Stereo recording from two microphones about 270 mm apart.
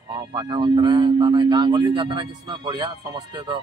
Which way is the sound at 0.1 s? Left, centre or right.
Centre.